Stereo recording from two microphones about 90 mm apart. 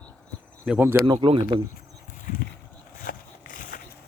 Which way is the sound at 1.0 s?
70° right (ahead or behind).